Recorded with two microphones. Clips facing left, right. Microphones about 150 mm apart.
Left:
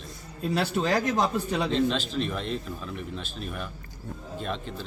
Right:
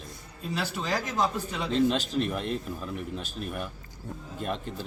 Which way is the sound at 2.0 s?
50° right (ahead or behind).